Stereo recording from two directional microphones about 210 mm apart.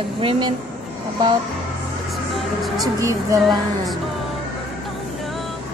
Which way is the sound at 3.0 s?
15° right (ahead or behind).